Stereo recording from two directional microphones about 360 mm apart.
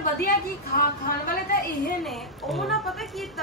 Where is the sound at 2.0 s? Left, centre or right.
Centre.